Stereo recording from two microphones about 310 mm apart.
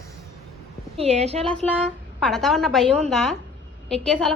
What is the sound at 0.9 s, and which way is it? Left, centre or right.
Speech, right.